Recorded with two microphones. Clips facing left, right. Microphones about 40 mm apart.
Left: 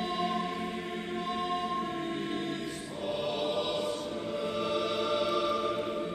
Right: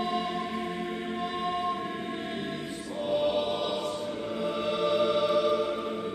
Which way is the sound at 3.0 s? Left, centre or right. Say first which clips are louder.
Right 6 dB; centre.